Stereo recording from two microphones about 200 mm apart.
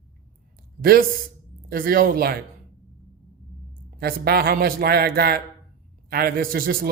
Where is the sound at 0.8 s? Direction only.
50° right (ahead or behind).